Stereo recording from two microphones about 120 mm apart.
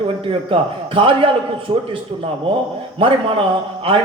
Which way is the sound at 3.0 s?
45° right (ahead or behind).